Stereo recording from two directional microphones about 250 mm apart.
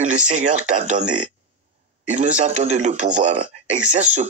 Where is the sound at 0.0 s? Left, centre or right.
Right.